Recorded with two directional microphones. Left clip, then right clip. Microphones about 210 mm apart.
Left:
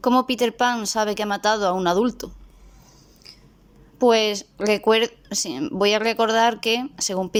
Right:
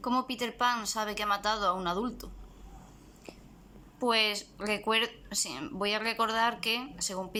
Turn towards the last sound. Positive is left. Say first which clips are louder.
# left 11 dB
turn(degrees=30)  # may be behind; listen again after turning